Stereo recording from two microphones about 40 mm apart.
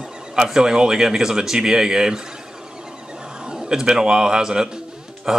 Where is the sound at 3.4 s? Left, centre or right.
Centre.